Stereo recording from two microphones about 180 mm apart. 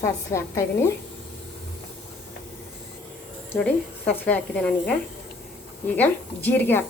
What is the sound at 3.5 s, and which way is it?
A woman's voice, 10° left (ahead or behind).